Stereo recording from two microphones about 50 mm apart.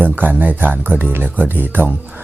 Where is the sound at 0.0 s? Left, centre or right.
Right.